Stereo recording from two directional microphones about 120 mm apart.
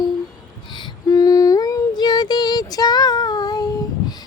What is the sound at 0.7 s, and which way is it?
Female singing, 35° left (ahead or behind).